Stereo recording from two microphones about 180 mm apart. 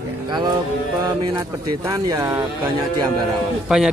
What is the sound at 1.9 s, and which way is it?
Speech, 20° right (ahead or behind).